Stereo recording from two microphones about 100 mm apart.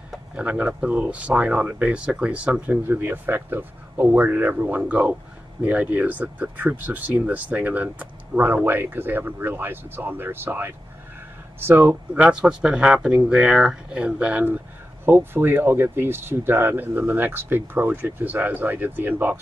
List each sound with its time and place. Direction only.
0.4 s speech: 10° right (ahead or behind)
12.1 s speech: 10° right (ahead or behind)